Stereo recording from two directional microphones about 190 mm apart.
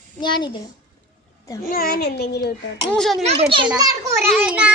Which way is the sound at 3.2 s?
30° right (ahead or behind).